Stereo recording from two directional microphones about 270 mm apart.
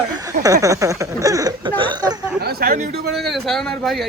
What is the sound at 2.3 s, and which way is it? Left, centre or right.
Speech, right.